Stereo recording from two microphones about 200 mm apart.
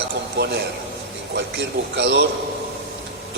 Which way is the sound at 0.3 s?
55° right (ahead or behind).